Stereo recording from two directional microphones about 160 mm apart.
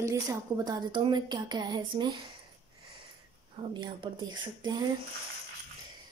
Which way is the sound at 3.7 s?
30° right (ahead or behind).